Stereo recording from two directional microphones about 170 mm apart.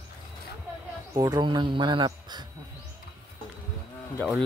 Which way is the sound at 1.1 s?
25° right (ahead or behind).